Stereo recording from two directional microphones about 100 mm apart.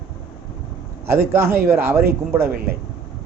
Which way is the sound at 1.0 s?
25° right (ahead or behind).